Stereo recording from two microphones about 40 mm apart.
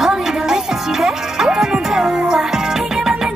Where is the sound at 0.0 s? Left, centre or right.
Centre.